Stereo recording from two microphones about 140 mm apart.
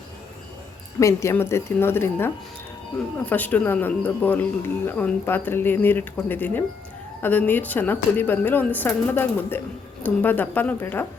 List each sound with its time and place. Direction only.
0.9 s speech: 20° left (ahead or behind)